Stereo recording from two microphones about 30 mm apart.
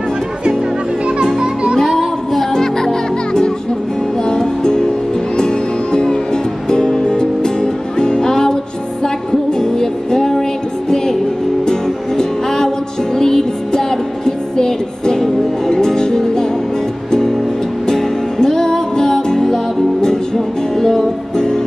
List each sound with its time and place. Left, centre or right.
1.4 s music: right
1.9 s a sound: centre
2.5 s music: centre
11.6 s music: centre